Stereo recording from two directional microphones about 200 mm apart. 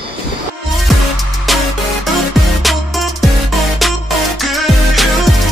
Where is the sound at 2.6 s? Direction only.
Centre (ahead or behind).